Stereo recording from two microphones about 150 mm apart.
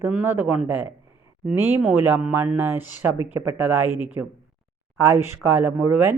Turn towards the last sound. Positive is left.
turn(degrees=-15)  # may be behind; listen again after turning